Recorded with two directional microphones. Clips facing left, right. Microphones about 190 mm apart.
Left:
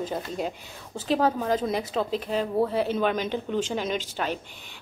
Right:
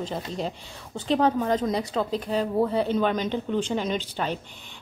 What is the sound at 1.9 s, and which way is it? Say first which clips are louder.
Speech: right 1 dB; 15° left (ahead or behind).